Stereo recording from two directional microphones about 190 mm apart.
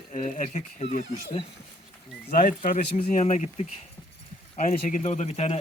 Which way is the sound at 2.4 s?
40° left (ahead or behind).